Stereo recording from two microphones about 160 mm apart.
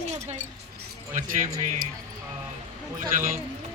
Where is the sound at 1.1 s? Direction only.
55° right (ahead or behind).